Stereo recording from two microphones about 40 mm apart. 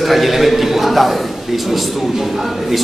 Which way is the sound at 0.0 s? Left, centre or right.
Centre.